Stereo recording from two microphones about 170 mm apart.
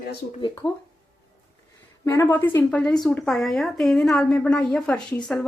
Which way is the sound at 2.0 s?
15° left (ahead or behind).